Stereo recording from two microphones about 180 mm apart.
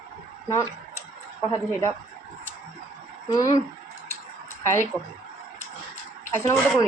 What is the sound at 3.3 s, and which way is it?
Speech, 20° left (ahead or behind).